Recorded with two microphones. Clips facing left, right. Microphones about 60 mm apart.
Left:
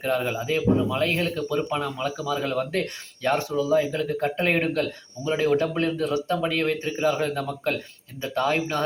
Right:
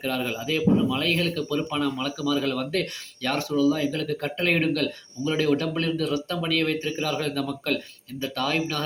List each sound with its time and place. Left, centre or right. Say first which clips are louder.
0.0 s speech: left 3 dB; left